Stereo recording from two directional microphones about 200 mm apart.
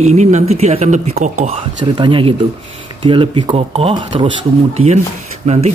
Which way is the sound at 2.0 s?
25° right (ahead or behind).